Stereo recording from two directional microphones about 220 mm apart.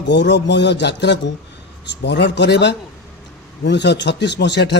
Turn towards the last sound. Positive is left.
turn(degrees=50)  # may be behind; listen again after turning